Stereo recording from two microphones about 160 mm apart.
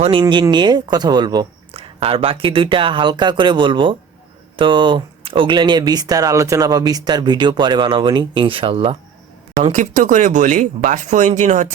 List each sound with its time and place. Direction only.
0.0 s speech: 30° right (ahead or behind)
9.7 s speech: 50° right (ahead or behind)